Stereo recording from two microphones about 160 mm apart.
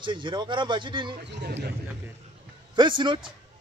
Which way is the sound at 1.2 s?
90° right.